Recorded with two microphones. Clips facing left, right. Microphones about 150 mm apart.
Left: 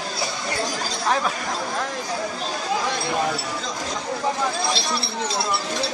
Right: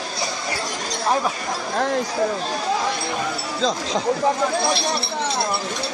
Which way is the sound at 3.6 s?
90° right.